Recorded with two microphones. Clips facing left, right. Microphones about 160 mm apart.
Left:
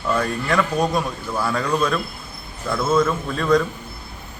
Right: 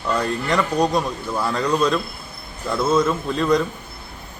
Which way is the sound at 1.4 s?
20° right (ahead or behind).